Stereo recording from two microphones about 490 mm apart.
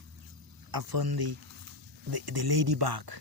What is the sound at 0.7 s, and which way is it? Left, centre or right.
Speech, right.